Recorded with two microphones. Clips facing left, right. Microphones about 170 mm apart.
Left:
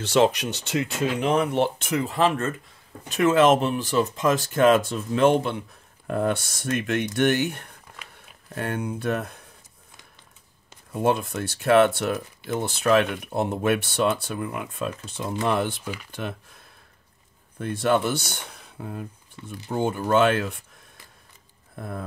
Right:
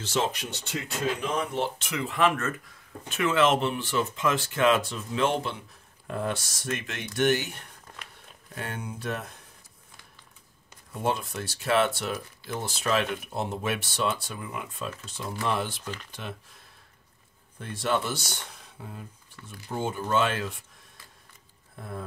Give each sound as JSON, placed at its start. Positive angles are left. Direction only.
{"t": 0.0, "sound": "speech", "side_deg": 75}
{"t": 1.8, "sound": "speech", "side_deg": 45}
{"t": 11.1, "sound": "speech", "side_deg": 55}
{"t": 15.8, "sound": "speech", "side_deg": 10}
{"t": 16.1, "sound": "speech", "side_deg": 55}
{"t": 17.6, "sound": "speech", "side_deg": 55}
{"t": 19.4, "sound": "speech", "side_deg": 20}
{"t": 19.7, "sound": "speech", "side_deg": 60}